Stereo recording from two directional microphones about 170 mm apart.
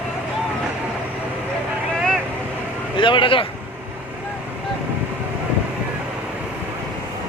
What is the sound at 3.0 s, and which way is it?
Speech, 30° left (ahead or behind).